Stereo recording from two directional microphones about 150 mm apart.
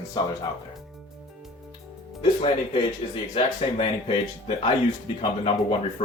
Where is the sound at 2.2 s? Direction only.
35° left (ahead or behind).